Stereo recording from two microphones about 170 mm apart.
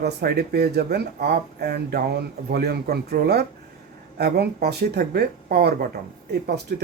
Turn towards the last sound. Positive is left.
turn(degrees=-70)  # may be behind; listen again after turning